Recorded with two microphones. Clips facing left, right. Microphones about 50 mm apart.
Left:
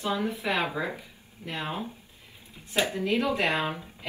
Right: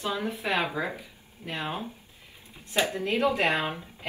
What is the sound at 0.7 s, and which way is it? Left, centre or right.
Speech, centre.